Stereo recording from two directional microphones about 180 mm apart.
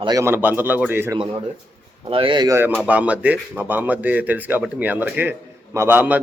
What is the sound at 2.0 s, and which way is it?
Speech, 30° right (ahead or behind).